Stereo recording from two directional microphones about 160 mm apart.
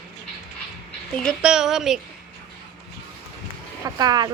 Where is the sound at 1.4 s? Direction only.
5° right (ahead or behind).